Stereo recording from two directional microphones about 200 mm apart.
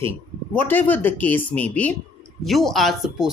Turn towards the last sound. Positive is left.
turn(degrees=0)  # may be behind; listen again after turning